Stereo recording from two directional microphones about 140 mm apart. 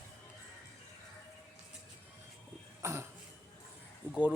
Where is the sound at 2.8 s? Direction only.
20° right (ahead or behind).